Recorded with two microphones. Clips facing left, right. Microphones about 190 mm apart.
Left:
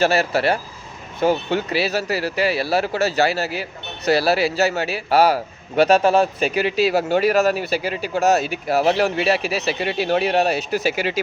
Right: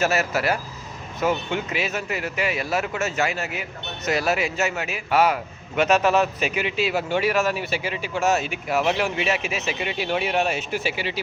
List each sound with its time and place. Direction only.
0.0 s speech: 30° left (ahead or behind)